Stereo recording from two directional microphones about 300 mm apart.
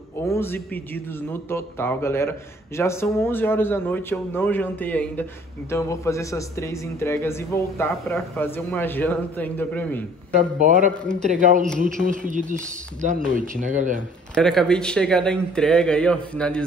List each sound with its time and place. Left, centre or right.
0.3 s a man's voice: centre
10.6 s speech: right
14.3 s speech: centre